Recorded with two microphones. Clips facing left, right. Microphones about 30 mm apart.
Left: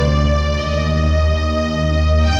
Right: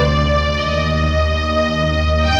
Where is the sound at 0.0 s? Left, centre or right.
Right.